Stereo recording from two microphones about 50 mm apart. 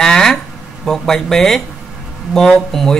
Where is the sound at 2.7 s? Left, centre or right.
Centre.